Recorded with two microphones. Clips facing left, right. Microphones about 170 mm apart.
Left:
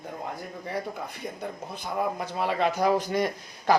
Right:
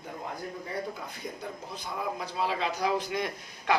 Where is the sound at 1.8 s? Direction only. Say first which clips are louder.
Left 6 dB; 50° left (ahead or behind).